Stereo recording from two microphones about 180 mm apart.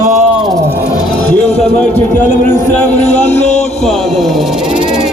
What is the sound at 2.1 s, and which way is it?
Speech, 45° left (ahead or behind).